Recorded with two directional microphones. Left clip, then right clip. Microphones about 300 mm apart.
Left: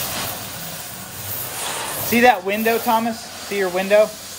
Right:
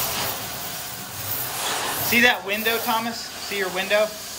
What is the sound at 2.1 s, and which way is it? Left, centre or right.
Speech, centre.